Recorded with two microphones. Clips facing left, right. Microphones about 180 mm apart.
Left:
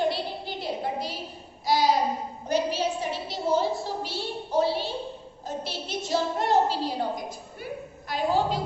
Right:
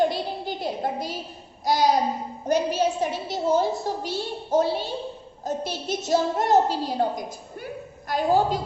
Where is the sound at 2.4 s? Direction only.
45° right (ahead or behind).